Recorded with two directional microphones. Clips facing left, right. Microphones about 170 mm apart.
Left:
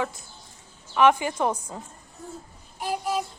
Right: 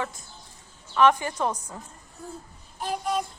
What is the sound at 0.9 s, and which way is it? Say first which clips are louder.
Speech: left 1 dB; 10° left (ahead or behind).